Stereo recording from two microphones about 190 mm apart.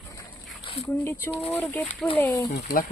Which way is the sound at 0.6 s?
30° left (ahead or behind).